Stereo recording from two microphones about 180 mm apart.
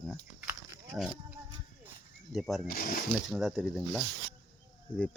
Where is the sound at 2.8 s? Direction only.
55° left (ahead or behind).